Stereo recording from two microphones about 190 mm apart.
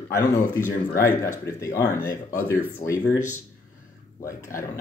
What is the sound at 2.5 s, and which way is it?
Speech, 10° right (ahead or behind).